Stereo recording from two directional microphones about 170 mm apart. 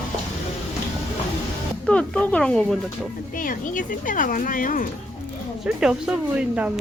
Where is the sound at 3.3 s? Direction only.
50° left (ahead or behind).